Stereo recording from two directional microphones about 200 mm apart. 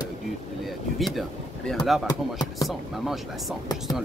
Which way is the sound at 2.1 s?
20° left (ahead or behind).